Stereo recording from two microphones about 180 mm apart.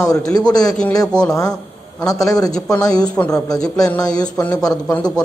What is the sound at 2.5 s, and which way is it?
Speech, 5° left (ahead or behind).